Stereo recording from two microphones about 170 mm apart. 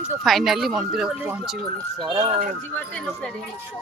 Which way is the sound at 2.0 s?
30° right (ahead or behind).